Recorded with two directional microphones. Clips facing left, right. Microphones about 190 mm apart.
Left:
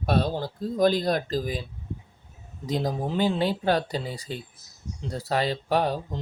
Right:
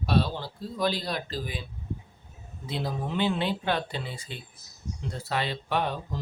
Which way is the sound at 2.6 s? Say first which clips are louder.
Left 5 dB; 40° left (ahead or behind).